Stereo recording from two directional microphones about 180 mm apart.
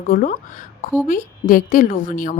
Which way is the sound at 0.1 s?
50° left (ahead or behind).